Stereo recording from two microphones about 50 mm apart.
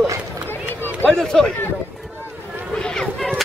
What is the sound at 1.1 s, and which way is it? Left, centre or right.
Speech, centre.